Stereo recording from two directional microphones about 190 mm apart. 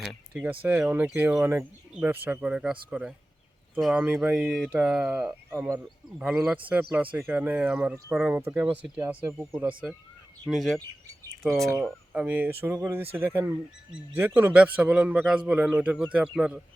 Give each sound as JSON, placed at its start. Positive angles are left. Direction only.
{"t": 0.0, "sound": "speech", "side_deg": -5}
{"t": 10.8, "sound": "speech", "side_deg": -15}